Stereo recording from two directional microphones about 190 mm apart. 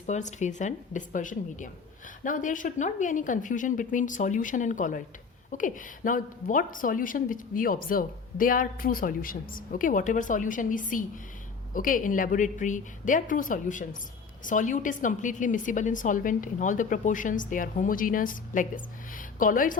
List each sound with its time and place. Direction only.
0.0 s a woman's voice: 40° left (ahead or behind)